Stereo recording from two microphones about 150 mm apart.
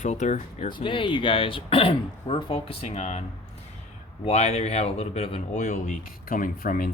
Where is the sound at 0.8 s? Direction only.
35° left (ahead or behind).